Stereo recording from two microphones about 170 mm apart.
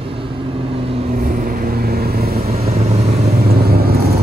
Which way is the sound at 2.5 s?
35° right (ahead or behind).